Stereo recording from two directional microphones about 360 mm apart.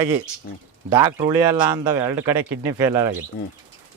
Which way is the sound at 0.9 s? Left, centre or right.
Centre.